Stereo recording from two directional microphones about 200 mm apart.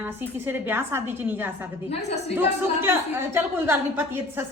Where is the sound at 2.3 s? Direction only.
10° right (ahead or behind).